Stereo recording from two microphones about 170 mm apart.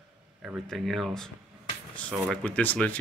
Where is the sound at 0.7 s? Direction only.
Centre (ahead or behind).